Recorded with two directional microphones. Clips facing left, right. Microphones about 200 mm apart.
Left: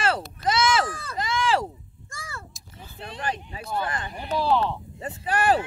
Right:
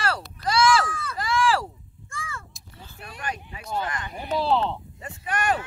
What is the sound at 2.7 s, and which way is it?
Speech, 20° left (ahead or behind).